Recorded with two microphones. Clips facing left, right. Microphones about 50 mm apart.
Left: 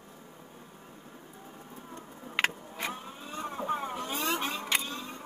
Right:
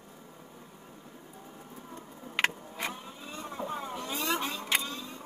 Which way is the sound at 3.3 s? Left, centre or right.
Left.